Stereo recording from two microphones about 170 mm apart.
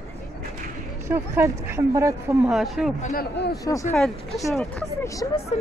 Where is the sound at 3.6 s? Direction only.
20° left (ahead or behind).